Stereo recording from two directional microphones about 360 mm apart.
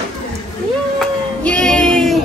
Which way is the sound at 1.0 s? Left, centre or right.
Centre.